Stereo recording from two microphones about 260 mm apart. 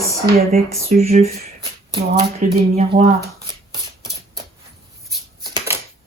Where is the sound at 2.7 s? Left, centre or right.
Right.